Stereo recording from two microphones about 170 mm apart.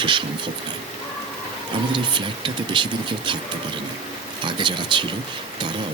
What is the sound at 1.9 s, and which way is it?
Speech, 30° right (ahead or behind).